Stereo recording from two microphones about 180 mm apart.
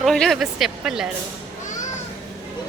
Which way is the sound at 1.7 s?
45° left (ahead or behind).